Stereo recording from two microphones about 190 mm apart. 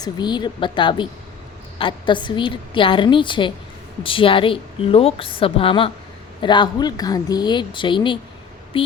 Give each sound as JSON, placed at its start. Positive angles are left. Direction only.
{"t": 0.0, "sound": "a woman's voice", "side_deg": 20}